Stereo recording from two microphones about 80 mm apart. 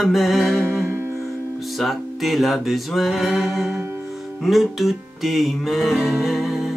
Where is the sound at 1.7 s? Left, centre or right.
Centre.